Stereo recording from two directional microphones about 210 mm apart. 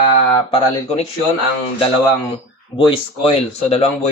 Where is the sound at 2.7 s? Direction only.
25° left (ahead or behind).